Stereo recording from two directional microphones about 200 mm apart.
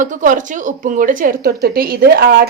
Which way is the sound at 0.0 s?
40° right (ahead or behind).